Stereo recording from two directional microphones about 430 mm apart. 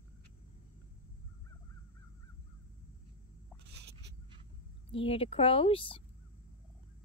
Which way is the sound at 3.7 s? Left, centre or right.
Right.